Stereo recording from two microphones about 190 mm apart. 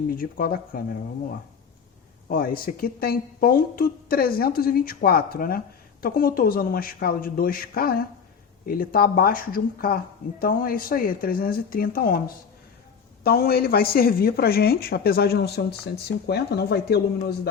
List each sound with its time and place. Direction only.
0.2 s speech: 50° left (ahead or behind)
2.3 s speech: 50° left (ahead or behind)
13.2 s speech: 55° left (ahead or behind)